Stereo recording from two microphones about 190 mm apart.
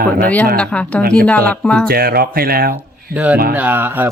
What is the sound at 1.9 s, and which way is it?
Speech, 55° right (ahead or behind).